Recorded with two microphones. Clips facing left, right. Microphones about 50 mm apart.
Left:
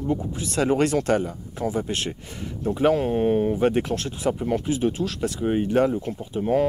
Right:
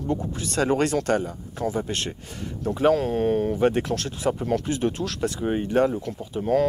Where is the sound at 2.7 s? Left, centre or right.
Left.